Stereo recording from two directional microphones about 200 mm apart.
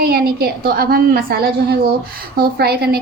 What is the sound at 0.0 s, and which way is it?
A woman's voice, 50° right (ahead or behind).